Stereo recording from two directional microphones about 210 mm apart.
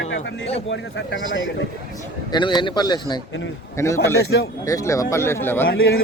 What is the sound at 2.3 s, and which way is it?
Speech, 20° left (ahead or behind).